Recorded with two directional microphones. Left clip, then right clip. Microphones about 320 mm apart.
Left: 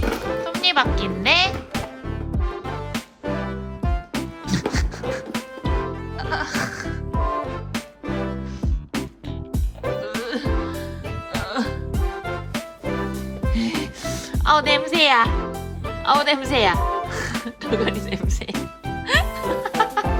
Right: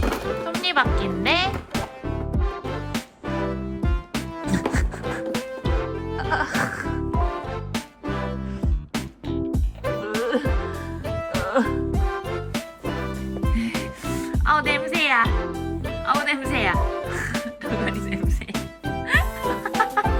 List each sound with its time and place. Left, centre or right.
0.0 s music: centre
4.1 s music: centre
8.9 s music: centre